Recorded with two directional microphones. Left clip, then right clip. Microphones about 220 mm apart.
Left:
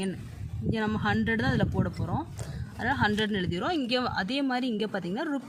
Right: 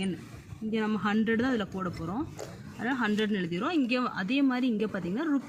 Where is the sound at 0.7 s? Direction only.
50° left (ahead or behind).